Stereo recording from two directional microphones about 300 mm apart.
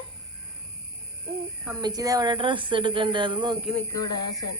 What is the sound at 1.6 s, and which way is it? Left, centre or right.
A woman's voice, centre.